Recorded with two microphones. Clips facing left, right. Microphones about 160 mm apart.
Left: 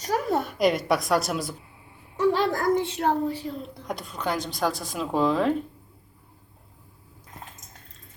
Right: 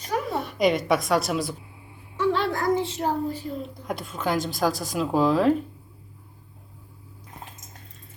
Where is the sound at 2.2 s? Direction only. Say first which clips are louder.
Left 1 dB; 40° left (ahead or behind).